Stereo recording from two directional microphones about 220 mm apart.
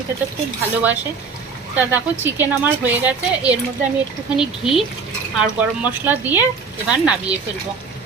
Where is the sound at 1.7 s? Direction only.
10° right (ahead or behind).